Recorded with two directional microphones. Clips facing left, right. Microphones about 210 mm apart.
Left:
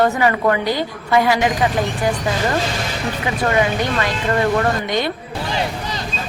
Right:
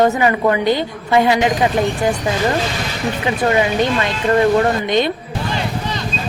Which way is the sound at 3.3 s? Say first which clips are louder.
Right 2 dB; 25° right (ahead or behind).